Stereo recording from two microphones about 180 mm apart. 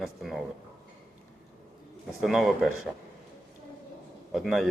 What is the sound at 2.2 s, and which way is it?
Speech, centre (ahead or behind).